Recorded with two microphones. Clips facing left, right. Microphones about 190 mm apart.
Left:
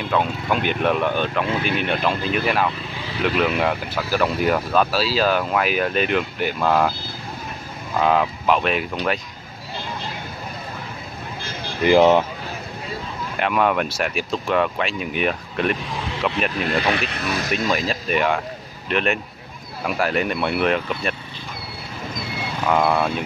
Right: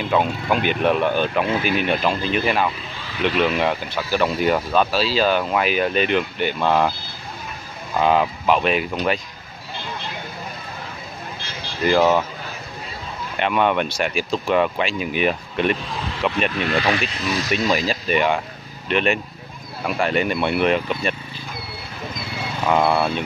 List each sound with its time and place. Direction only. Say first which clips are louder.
0.0 s speech: right 2 dB; 5° right (ahead or behind)
8.0 s speech: right 1 dB; centre (ahead or behind)
11.8 s speech: left 3 dB; 15° left (ahead or behind)
13.4 s speech: right 1 dB; centre (ahead or behind)
17.1 s speech: right 1 dB; 60° left (ahead or behind)
17.6 s speech: right 2 dB; centre (ahead or behind)
22.7 s speech: right 1 dB; 5° right (ahead or behind)